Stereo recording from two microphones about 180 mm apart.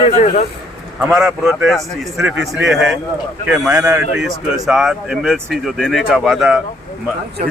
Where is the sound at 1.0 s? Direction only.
5° right (ahead or behind).